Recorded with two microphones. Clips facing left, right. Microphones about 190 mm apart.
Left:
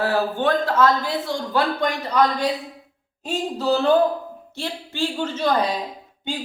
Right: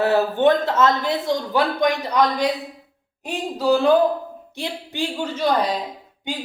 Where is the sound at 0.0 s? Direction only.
20° right (ahead or behind).